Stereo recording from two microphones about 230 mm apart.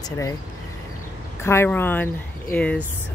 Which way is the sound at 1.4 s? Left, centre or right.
Centre.